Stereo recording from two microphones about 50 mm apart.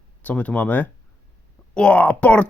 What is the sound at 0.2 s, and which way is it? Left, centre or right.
A child's voice, left.